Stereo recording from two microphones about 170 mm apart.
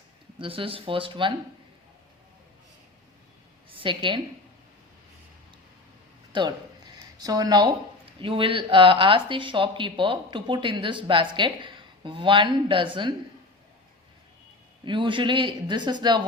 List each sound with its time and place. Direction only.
0.3 s speech: 30° right (ahead or behind)
3.7 s a woman's voice: 30° right (ahead or behind)
6.3 s a sound: 25° right (ahead or behind)
8.2 s speech: 30° right (ahead or behind)
14.8 s speech: 30° right (ahead or behind)